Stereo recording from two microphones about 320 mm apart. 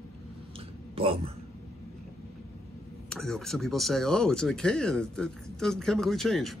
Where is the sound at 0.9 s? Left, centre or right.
Centre.